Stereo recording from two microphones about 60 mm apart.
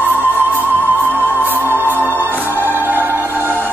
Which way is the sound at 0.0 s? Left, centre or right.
Right.